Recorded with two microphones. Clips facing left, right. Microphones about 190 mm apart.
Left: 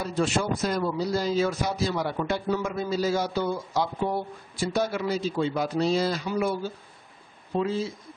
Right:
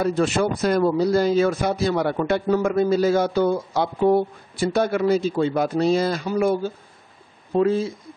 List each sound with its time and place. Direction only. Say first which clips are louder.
0.0 s speech: right 6 dB; 60° right (ahead or behind)